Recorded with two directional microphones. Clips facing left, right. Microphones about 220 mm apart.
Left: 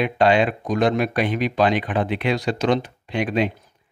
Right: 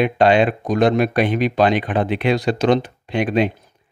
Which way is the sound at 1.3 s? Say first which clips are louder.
Right 3 dB; 60° right (ahead or behind).